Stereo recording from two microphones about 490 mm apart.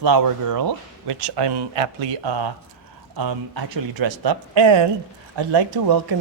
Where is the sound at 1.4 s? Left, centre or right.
Right.